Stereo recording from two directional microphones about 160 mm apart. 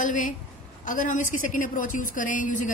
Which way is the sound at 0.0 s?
55° left (ahead or behind).